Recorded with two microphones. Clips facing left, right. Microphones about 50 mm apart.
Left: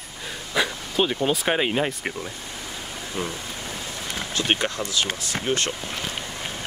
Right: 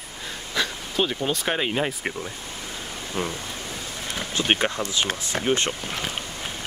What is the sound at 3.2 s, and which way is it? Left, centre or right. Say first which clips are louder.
Speech: right 1 dB; right.